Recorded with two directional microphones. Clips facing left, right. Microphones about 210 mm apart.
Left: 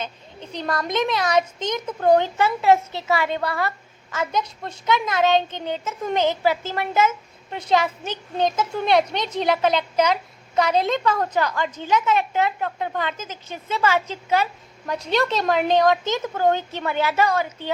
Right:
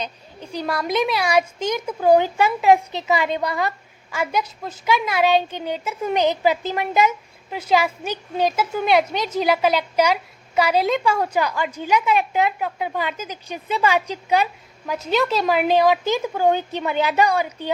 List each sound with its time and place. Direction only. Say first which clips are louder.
0.0 s a woman's voice: right 1 dB; 10° right (ahead or behind)
14.8 s a woman's voice: right 1 dB; 5° right (ahead or behind)